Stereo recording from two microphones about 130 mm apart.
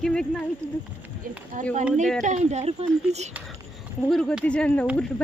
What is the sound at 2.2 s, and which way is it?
Speech, 65° right (ahead or behind).